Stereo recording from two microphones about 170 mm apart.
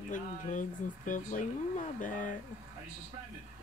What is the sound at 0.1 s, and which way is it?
Speech, 50° left (ahead or behind).